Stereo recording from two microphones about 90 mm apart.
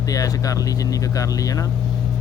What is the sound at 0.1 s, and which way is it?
Speech, 40° left (ahead or behind).